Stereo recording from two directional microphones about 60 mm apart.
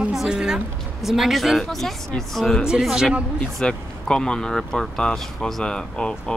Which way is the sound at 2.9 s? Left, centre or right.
Centre.